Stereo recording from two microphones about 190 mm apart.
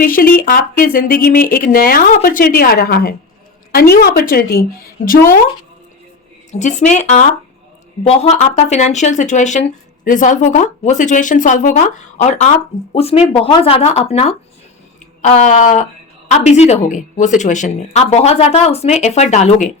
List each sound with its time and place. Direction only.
0.0 s speech: 50° left (ahead or behind)
6.6 s speech: 40° left (ahead or behind)